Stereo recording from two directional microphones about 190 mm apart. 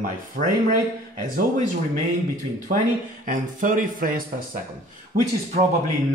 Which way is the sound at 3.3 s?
45° right (ahead or behind).